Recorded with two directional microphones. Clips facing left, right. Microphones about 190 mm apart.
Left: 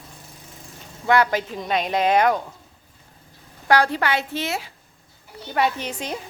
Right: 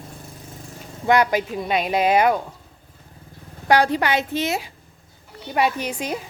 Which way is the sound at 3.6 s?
15° right (ahead or behind).